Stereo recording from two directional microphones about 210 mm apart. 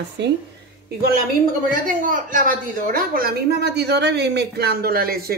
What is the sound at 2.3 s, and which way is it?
Speech, 40° right (ahead or behind).